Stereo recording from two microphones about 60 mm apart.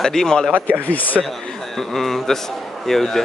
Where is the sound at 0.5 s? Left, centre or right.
Right.